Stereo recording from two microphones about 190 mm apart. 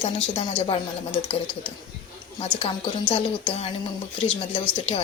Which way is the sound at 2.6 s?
30° left (ahead or behind).